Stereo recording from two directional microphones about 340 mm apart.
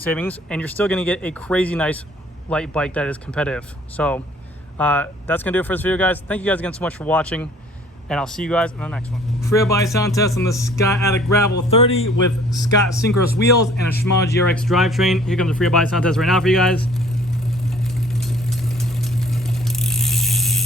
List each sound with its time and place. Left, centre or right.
0.0 s speech: centre
14.0 s speech: centre
18.2 s vehicle: centre